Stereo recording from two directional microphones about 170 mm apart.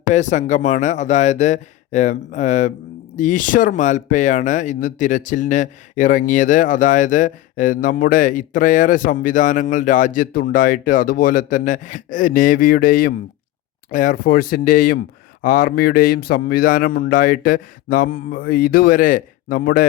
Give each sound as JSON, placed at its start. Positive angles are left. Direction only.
{"t": 0.1, "sound": "speech", "side_deg": 45}